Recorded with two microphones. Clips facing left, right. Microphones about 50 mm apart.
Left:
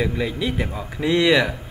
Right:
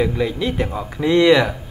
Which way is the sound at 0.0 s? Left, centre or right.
Centre.